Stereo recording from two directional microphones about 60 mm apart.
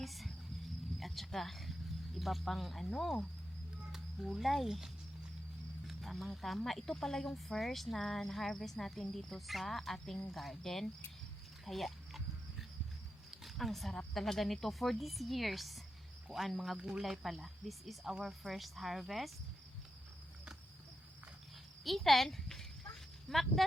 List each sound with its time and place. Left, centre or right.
0.0 s cricket: centre
2.1 s speech: centre
5.9 s speech: centre
11.6 s dog: centre
13.3 s a sound: centre
14.1 s speech: centre
16.7 s speech: centre
17.0 s speech: centre
21.8 s speech: centre